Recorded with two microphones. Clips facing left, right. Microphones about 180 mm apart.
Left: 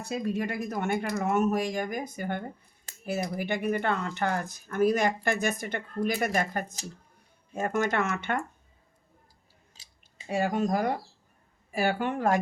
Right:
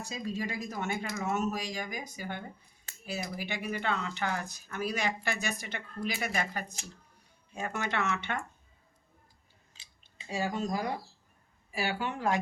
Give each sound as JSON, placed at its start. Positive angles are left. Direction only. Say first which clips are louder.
{"t": 0.0, "sound": "speech", "louder": "left 6 dB", "side_deg": 60}
{"t": 9.7, "sound": "clicking", "louder": "right 2 dB", "side_deg": 40}
{"t": 10.2, "sound": "speech", "louder": "left 6 dB", "side_deg": 55}